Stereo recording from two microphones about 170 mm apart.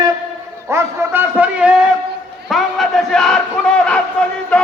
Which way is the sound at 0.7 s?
15° right (ahead or behind).